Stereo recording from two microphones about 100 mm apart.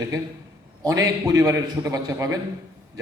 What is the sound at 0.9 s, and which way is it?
A man's voice, 35° right (ahead or behind).